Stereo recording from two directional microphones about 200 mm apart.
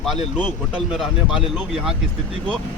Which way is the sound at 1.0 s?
5° right (ahead or behind).